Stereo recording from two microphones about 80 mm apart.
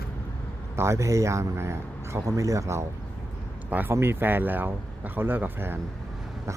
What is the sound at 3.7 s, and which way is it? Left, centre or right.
Speech, right.